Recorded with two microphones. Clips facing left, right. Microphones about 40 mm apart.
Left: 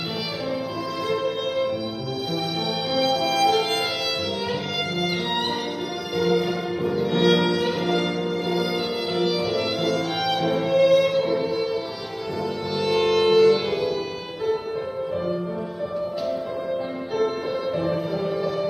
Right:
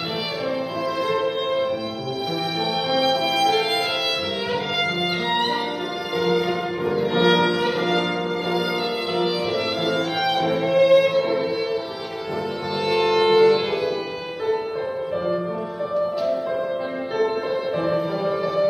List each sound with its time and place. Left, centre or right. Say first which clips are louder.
1.2 s music: right 2 dB; centre
2.9 s music: right 1 dB; centre
12.8 s music: right 1 dB; centre
17.7 s music: right 2 dB; centre